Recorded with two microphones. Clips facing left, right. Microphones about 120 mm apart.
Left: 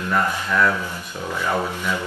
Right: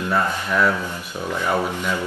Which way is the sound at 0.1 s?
15° right (ahead or behind).